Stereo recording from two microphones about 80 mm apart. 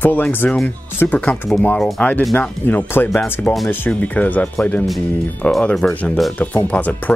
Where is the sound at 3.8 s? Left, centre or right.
Centre.